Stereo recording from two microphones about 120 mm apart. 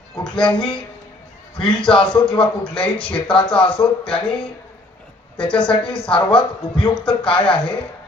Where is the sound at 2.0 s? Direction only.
40° left (ahead or behind).